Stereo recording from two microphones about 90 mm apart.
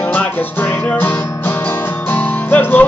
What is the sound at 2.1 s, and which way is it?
Music, 20° left (ahead or behind).